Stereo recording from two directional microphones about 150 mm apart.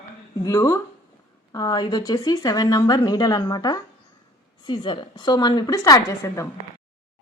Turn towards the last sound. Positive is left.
turn(degrees=20)  # may be behind; listen again after turning